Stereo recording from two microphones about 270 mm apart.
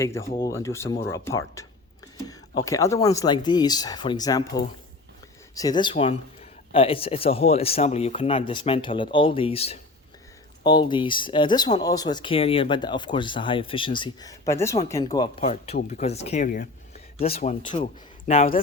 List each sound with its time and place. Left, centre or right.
0.0 s speech: centre
2.6 s speech: centre
5.5 s speech: centre